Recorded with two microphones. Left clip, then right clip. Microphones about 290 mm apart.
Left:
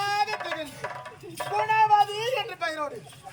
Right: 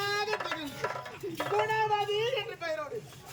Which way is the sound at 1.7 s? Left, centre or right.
Centre.